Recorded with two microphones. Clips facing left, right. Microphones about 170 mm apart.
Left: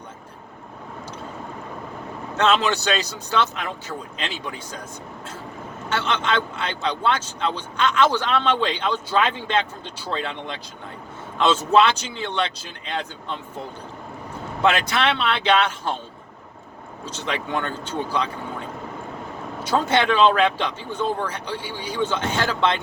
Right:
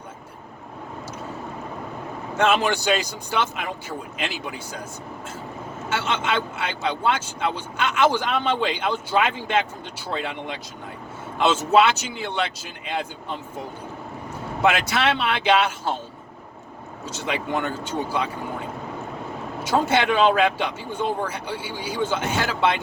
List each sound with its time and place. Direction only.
2.3 s a man's voice: 10° right (ahead or behind)
5.9 s a man's voice: 10° right (ahead or behind)
14.6 s a man's voice: 10° right (ahead or behind)
17.1 s a man's voice: 10° right (ahead or behind)